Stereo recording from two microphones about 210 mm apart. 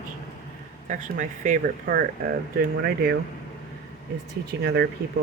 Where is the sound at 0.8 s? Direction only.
35° right (ahead or behind).